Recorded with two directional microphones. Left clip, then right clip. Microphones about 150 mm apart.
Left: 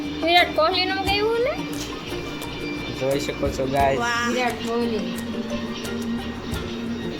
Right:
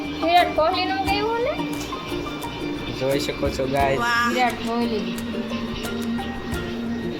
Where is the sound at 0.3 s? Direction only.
50° left (ahead or behind).